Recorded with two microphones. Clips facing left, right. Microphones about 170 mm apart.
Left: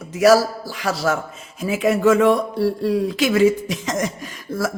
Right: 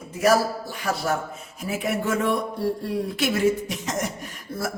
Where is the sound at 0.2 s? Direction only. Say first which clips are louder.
Left 6 dB; 90° left.